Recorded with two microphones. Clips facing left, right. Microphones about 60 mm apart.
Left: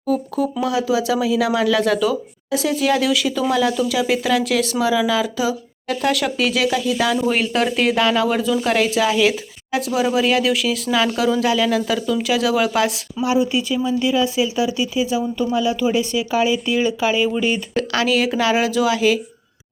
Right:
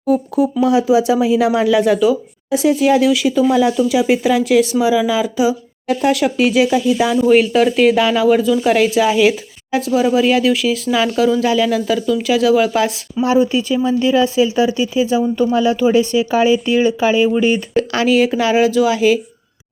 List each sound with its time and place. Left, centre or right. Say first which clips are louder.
0.1 s speech: right 5 dB; centre
7.2 s speech: right 7 dB; centre
13.2 s speech: right 4 dB; right
17.7 s speech: right 4 dB; centre